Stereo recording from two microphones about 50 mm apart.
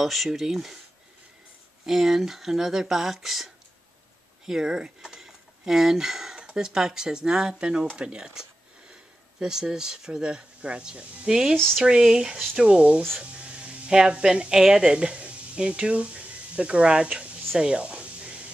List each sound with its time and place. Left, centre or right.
0.0 s speech: centre
1.9 s speech: centre
17.6 s a sound: centre